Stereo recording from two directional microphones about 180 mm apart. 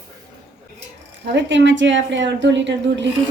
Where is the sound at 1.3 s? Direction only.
85° right.